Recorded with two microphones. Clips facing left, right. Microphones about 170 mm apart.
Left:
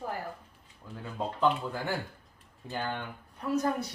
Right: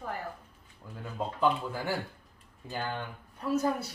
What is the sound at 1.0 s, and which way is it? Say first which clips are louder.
Speech: even; 5° right (ahead or behind).